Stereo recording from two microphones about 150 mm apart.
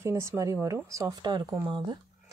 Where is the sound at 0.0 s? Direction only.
20° right (ahead or behind).